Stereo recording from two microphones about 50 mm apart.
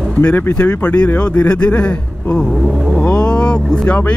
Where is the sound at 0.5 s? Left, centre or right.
Left.